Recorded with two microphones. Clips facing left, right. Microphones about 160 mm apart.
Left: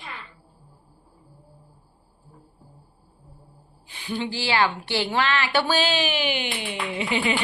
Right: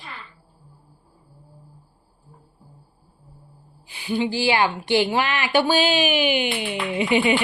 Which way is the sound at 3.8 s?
10° right (ahead or behind).